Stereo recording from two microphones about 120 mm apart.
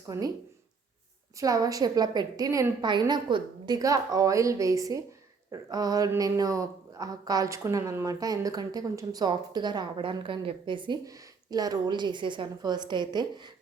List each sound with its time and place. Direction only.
0.1 s a woman's voice: 25° right (ahead or behind)
1.4 s a woman's voice: 30° right (ahead or behind)